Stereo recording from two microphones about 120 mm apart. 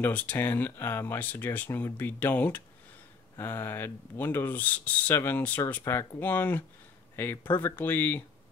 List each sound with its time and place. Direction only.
0.0 s speech: 15° left (ahead or behind)